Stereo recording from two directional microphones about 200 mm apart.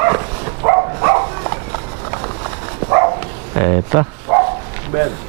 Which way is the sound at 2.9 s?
20° right (ahead or behind).